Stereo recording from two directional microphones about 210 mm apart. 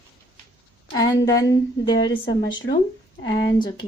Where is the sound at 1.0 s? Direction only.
15° left (ahead or behind).